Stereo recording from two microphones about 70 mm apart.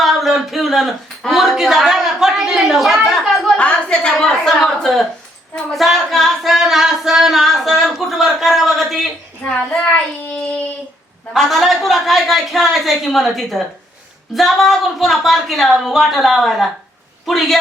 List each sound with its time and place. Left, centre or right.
0.0 s a sound: centre
3.6 s a woman's voice: centre
5.7 s singing: centre
9.4 s a child's voice: centre
11.3 s a woman's voice: centre